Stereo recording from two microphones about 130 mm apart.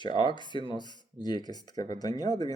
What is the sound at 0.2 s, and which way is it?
Speech, 35° left (ahead or behind).